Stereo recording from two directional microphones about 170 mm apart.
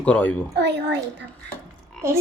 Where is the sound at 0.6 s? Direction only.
90° right.